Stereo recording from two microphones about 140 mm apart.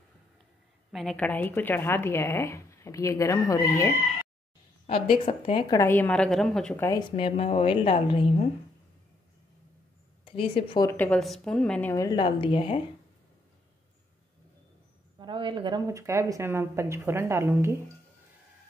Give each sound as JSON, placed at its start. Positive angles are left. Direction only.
{"t": 0.9, "sound": "speech", "side_deg": 5}
{"t": 4.8, "sound": "a woman's voice", "side_deg": 40}
{"t": 5.8, "sound": "speech", "side_deg": 15}
{"t": 7.0, "sound": "a woman's voice", "side_deg": 40}
{"t": 10.2, "sound": "a woman's voice", "side_deg": 40}
{"t": 10.9, "sound": "speech", "side_deg": 15}
{"t": 11.1, "sound": "a woman's voice", "side_deg": 0}
{"t": 11.9, "sound": "a woman's voice", "side_deg": 25}
{"t": 12.2, "sound": "a woman's voice", "side_deg": 35}
{"t": 15.1, "sound": "a woman's voice", "side_deg": -35}
{"t": 15.9, "sound": "a woman's voice", "side_deg": -20}